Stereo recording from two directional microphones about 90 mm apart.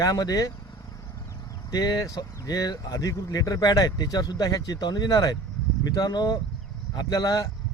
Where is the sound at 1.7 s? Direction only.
45° left (ahead or behind).